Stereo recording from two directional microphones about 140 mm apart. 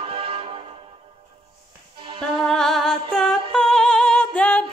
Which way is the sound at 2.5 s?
5° left (ahead or behind).